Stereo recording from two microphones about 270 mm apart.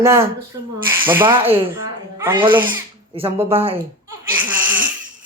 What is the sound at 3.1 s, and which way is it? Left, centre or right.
Speech, right.